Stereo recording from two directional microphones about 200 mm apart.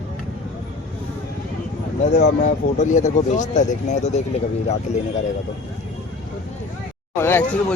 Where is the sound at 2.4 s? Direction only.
40° left (ahead or behind).